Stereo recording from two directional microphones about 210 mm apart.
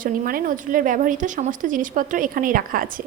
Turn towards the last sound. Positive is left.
turn(degrees=-40)  # may be behind; listen again after turning